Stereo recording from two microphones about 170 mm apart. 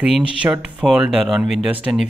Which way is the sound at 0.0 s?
5° right (ahead or behind).